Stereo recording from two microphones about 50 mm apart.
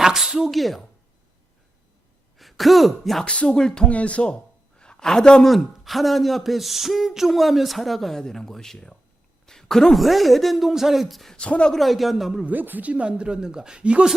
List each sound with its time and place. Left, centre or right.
0.0 s speech: centre
2.4 s speech: centre
3.4 s speech: centre
3.8 s a woman's voice: left
5.5 s speech: centre
9.5 s a sound: centre
10.0 s speech: centre
11.3 s speech: left
11.7 s speech: centre
12.5 s speech: right